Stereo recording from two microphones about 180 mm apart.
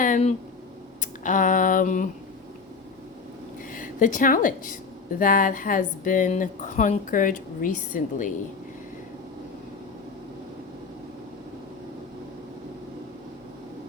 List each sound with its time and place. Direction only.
0.0 s speech: 40° left (ahead or behind)
3.8 s a woman's voice: 45° left (ahead or behind)